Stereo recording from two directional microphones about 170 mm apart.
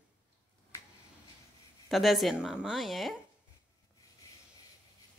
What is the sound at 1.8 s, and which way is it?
A woman's voice, centre (ahead or behind).